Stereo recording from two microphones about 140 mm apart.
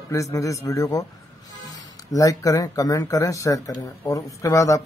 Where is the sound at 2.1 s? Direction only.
25° left (ahead or behind).